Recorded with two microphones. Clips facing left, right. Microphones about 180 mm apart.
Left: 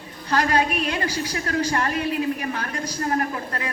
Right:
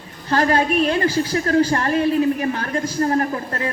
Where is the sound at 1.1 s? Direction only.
50° right (ahead or behind).